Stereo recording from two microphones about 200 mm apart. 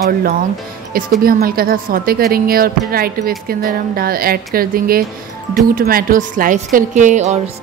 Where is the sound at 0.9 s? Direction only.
45° right (ahead or behind).